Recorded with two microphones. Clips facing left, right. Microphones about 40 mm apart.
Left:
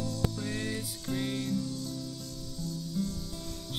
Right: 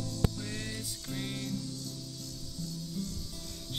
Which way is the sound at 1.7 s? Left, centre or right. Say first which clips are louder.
Left 5 dB; left.